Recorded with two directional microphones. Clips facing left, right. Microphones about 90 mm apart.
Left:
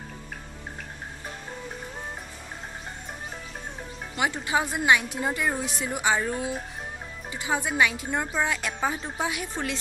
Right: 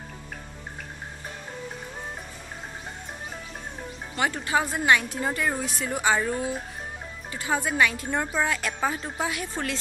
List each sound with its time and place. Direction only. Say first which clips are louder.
4.2 s a woman's voice: right 1 dB; 15° left (ahead or behind)